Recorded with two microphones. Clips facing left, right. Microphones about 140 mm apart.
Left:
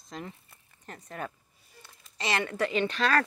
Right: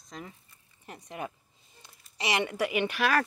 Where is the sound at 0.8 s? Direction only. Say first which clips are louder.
Even; 10° right (ahead or behind).